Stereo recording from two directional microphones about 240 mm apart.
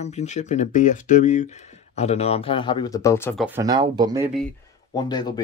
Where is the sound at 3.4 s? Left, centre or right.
Centre.